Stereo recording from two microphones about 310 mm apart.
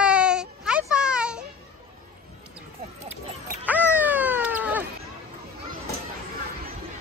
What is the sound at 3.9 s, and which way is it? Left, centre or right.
Cat, centre.